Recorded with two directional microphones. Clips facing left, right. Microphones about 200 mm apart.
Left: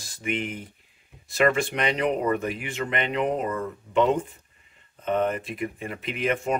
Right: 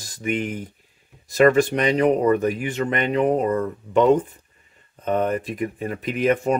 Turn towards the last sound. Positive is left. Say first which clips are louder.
# right 6 dB
turn(degrees=-40)  # may be behind; listen again after turning